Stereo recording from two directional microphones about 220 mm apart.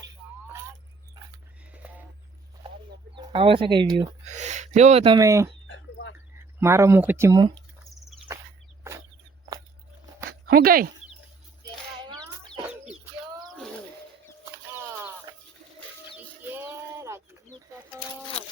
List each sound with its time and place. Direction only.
1.7 s a sound: 5° right (ahead or behind)
3.2 s speech: 25° right (ahead or behind)
4.3 s speech: 30° right (ahead or behind); by 5.5 s 15° right (ahead or behind)
5.6 s a sound: 60° left (ahead or behind)
6.6 s speech: 10° right (ahead or behind)
10.4 s speech: 45° right (ahead or behind)
11.6 s chicken: 20° right (ahead or behind)
12.6 s chicken: 5° right (ahead or behind)
14.5 s a sound: 10° right (ahead or behind)
16.1 s bird: 10° right (ahead or behind)